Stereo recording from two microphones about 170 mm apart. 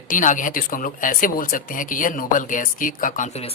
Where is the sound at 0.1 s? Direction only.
50° left (ahead or behind).